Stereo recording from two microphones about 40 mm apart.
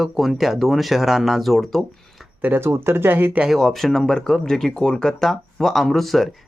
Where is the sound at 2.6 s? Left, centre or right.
Right.